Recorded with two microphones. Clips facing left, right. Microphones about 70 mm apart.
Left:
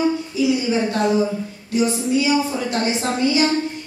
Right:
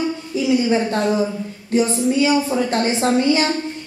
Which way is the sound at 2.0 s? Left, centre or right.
Right.